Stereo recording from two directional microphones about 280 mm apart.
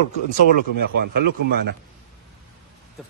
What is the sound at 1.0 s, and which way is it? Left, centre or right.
Speech, right.